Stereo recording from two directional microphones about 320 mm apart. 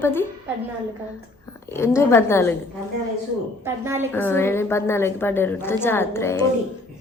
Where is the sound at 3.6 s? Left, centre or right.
Centre.